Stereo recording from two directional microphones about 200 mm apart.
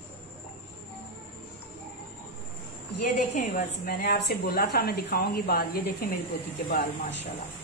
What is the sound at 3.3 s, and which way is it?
A woman's voice, 50° left (ahead or behind).